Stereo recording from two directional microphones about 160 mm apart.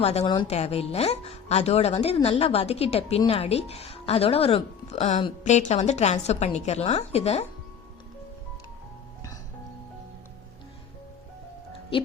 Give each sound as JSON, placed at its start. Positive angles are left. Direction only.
{"t": 0.0, "sound": "a woman's voice", "side_deg": 40}